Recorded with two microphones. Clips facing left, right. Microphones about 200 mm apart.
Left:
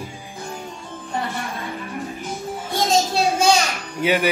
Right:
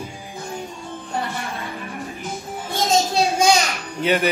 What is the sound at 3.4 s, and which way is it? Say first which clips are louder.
Children playing: even; 15° right (ahead or behind).